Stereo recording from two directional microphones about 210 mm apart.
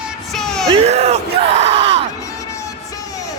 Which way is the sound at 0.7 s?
30° right (ahead or behind).